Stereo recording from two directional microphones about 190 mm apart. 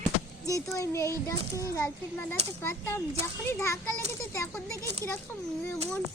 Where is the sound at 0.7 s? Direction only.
15° left (ahead or behind).